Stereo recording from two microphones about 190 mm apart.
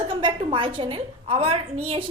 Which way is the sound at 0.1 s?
25° right (ahead or behind).